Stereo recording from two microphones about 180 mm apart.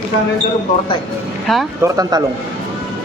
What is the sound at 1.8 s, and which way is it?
Speech, 20° right (ahead or behind).